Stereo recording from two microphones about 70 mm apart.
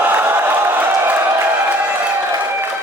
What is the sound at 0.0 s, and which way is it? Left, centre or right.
Crowd, right.